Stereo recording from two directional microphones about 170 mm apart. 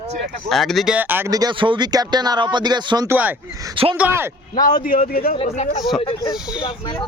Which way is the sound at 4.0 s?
15° right (ahead or behind).